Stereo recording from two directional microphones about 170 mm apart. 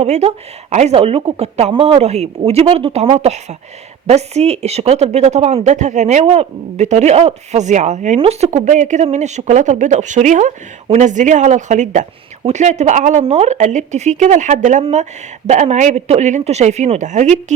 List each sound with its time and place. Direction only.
0.0 s speech: 35° right (ahead or behind)